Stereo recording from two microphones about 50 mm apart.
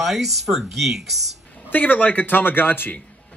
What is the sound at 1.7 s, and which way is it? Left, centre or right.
Speech, left.